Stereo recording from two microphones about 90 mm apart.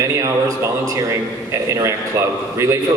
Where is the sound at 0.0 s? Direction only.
40° right (ahead or behind).